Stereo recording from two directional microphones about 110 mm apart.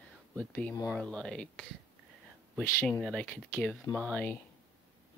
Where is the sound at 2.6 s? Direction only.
20° left (ahead or behind).